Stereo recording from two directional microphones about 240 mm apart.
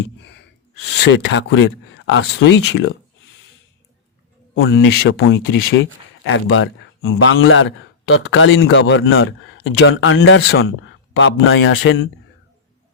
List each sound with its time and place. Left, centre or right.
1.2 s speech: left
4.5 s speech: left